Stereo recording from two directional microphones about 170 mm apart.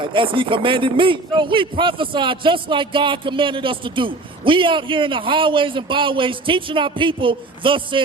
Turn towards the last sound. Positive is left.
turn(degrees=-30)  # may be behind; listen again after turning